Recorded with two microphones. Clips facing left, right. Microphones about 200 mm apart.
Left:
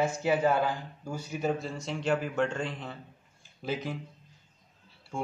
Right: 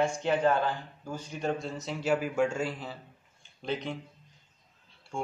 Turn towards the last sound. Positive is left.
turn(degrees=0)  # may be behind; listen again after turning